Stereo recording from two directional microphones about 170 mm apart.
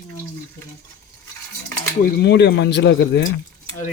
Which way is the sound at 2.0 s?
65° left (ahead or behind).